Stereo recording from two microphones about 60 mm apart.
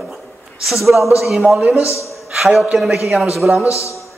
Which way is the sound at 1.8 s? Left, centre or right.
Left.